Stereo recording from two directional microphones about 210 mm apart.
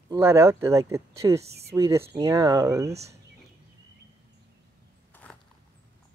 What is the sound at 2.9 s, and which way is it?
Speech, 30° right (ahead or behind).